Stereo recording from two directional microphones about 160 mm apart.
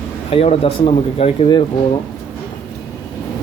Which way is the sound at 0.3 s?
40° left (ahead or behind).